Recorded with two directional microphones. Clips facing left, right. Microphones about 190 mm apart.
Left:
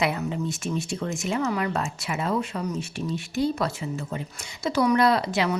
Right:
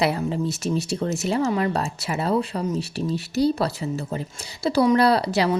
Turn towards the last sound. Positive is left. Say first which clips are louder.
# right 3 dB
turn(degrees=-35)  # may be behind; listen again after turning